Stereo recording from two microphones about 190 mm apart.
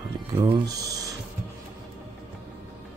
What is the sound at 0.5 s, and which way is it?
Speech, 20° right (ahead or behind).